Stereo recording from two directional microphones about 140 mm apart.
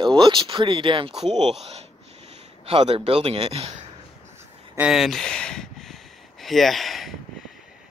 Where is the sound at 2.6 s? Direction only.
45° right (ahead or behind).